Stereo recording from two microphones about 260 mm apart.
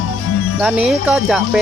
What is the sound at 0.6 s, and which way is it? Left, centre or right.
Speech, centre.